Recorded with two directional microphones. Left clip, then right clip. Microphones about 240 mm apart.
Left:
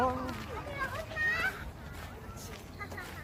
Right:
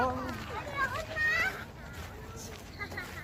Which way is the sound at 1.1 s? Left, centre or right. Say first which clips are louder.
Right 1 dB; right.